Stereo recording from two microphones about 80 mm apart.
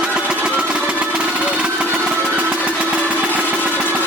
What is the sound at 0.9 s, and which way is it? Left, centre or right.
Engine, centre.